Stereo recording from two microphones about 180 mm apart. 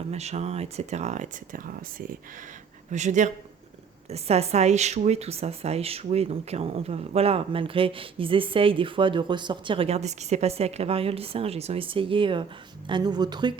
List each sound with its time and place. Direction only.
0.1 s speech: 35° right (ahead or behind)